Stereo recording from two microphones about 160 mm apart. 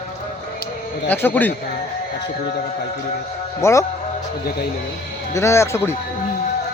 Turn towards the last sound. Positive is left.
turn(degrees=15)  # may be behind; listen again after turning